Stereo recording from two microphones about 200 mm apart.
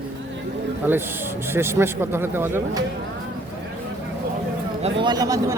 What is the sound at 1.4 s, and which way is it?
A man's voice, 10° right (ahead or behind).